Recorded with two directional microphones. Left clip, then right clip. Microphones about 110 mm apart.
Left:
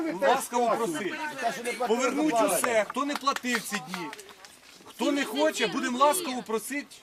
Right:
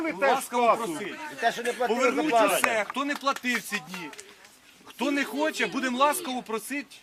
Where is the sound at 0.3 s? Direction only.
Centre (ahead or behind).